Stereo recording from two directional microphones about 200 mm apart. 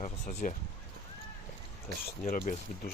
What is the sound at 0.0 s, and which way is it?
Speech, 35° left (ahead or behind).